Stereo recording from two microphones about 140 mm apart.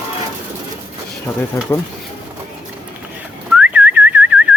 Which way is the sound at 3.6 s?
10° right (ahead or behind).